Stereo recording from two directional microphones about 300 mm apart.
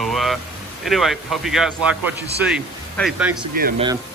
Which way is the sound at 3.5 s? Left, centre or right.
Right.